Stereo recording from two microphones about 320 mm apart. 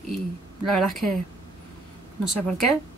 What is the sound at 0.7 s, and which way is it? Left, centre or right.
Speech, centre.